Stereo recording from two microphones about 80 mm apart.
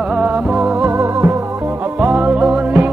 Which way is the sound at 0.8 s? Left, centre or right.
Right.